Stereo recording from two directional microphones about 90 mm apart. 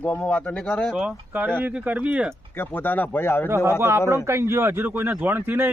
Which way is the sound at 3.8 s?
30° right (ahead or behind).